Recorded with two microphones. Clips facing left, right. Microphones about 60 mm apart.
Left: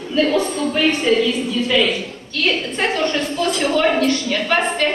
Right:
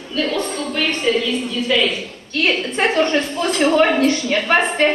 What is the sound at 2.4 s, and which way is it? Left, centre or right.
A woman's voice, right.